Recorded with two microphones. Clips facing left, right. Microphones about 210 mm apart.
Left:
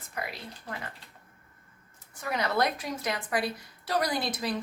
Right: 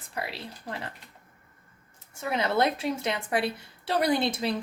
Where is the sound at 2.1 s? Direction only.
25° right (ahead or behind).